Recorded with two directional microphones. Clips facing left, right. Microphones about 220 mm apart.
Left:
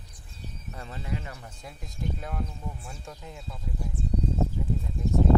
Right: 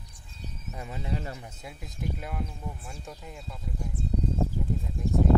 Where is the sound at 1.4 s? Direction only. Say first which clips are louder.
Right 1 dB; 5° right (ahead or behind).